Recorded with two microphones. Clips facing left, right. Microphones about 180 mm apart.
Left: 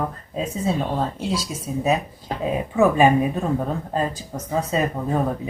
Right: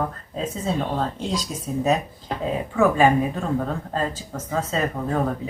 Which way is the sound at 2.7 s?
15° left (ahead or behind).